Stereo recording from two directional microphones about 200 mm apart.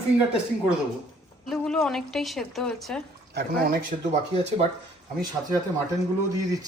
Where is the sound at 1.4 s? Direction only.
5° left (ahead or behind).